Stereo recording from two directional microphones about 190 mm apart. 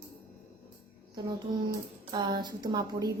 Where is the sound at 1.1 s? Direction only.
20° right (ahead or behind).